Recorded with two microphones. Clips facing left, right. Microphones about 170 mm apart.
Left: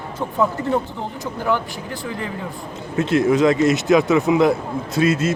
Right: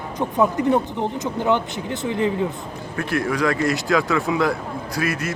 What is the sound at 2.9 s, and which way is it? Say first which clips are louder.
Speech: left 7 dB; 20° left (ahead or behind).